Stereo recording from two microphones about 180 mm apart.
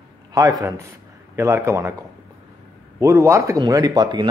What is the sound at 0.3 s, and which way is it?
A man's voice, 20° right (ahead or behind).